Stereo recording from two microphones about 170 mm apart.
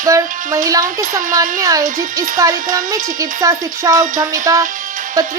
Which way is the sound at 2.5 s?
50° right (ahead or behind).